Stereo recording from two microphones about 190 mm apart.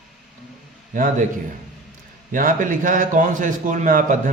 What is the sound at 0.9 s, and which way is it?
Speech, 40° right (ahead or behind).